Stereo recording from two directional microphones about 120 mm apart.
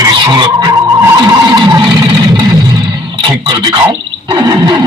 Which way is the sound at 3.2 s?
35° right (ahead or behind).